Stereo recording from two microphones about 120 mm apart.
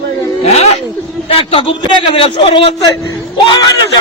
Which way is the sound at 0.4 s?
60° left (ahead or behind).